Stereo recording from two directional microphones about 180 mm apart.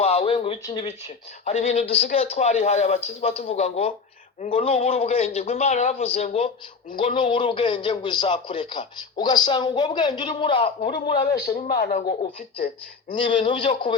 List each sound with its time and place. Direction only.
0.0 s a sound: 35° left (ahead or behind)
1.5 s a man's voice: 35° left (ahead or behind)
11.8 s speech: 45° left (ahead or behind)
13.2 s a man's voice: 25° left (ahead or behind)